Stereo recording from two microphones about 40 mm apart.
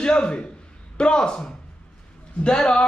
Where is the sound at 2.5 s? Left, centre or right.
Left.